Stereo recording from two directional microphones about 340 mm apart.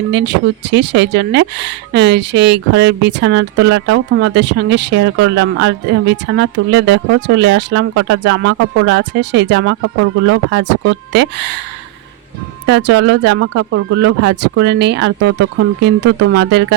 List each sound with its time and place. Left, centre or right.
0.1 s speech: right
12.6 s speech: right